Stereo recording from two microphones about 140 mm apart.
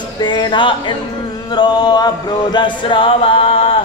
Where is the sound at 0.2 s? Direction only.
35° left (ahead or behind).